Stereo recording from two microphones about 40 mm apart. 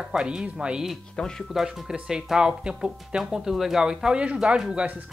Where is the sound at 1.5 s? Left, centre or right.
Centre.